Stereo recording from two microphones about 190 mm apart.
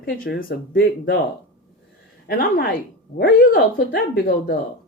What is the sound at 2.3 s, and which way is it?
Speech, 50° left (ahead or behind).